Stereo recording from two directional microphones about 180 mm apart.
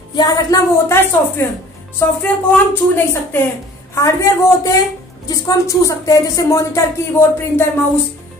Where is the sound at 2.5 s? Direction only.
10° left (ahead or behind).